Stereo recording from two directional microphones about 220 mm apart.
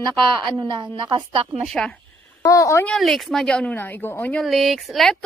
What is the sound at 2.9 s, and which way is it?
Speech, centre (ahead or behind).